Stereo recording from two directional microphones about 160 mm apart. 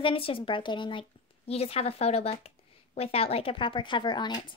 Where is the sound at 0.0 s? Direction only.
35° left (ahead or behind).